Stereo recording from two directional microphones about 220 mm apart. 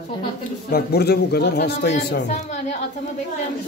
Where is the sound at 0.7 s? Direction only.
45° left (ahead or behind).